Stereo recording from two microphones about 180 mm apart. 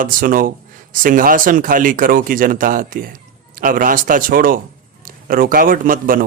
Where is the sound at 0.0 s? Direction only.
50° right (ahead or behind).